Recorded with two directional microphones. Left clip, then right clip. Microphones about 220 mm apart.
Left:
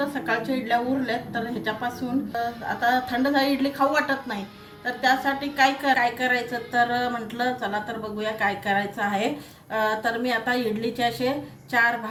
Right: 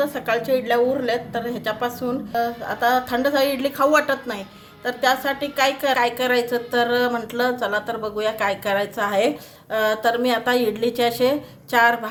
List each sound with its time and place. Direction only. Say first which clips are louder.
0.0 s a woman's voice: right 4 dB; 65° right (ahead or behind)
2.8 s a woman's voice: right 4 dB; 60° right (ahead or behind)